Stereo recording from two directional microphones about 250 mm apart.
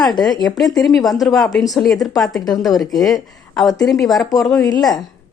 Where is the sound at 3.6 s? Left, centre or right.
Centre.